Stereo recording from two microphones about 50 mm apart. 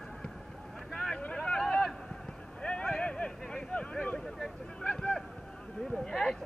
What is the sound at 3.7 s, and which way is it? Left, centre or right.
Speech, left.